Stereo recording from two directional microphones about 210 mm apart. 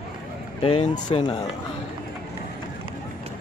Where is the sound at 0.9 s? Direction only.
20° left (ahead or behind).